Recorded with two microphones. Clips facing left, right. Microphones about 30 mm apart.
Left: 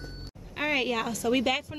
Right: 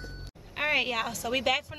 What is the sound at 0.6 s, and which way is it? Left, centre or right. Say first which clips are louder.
A woman's voice: even; centre.